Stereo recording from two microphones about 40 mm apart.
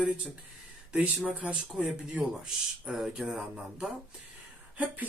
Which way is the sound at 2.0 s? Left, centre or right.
Right.